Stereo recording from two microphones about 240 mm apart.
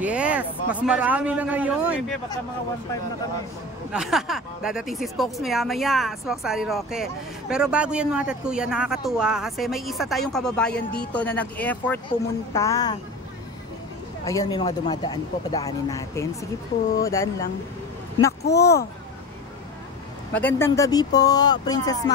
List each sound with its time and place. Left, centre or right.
0.0 s a woman's voice: centre
3.9 s a woman's voice: centre
14.2 s speech: centre
20.3 s speech: centre